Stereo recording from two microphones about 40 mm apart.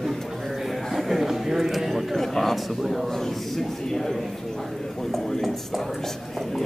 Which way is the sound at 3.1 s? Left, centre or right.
Centre.